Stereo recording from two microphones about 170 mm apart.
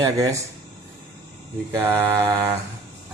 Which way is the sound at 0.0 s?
20° right (ahead or behind).